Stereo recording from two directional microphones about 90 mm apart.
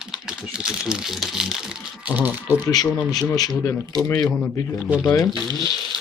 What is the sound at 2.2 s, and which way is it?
Speech, 20° right (ahead or behind).